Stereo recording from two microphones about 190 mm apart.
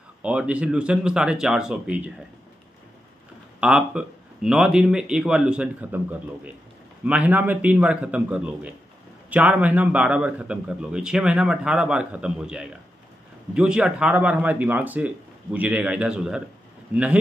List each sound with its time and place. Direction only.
0.2 s a man's voice: 5° right (ahead or behind)
3.6 s a man's voice: 5° right (ahead or behind)